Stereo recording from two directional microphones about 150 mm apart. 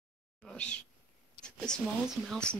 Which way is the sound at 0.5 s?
5° left (ahead or behind).